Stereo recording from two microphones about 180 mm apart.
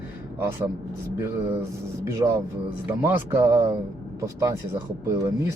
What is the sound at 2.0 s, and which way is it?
Speech, 15° right (ahead or behind).